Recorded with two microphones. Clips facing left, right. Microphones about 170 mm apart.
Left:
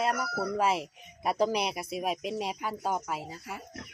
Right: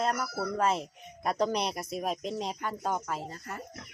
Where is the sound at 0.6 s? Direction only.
10° left (ahead or behind).